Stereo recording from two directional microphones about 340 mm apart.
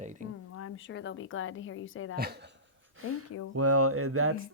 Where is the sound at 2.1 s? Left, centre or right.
Right.